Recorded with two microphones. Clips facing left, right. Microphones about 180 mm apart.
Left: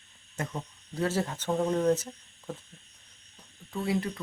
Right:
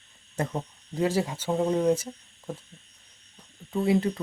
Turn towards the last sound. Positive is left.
turn(degrees=-25)  # may be behind; listen again after turning